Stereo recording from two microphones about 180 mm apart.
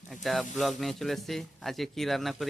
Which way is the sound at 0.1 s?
Centre (ahead or behind).